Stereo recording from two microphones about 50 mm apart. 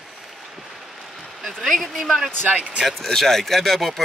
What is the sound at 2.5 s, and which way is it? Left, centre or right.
Speech, right.